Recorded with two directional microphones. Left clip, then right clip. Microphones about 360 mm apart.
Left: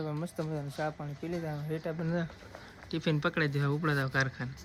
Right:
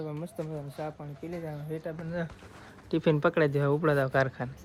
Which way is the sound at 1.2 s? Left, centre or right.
Centre.